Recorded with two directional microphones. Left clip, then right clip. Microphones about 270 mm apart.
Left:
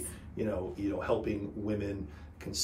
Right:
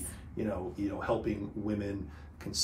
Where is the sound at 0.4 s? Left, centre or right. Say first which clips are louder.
Left 1 dB; centre.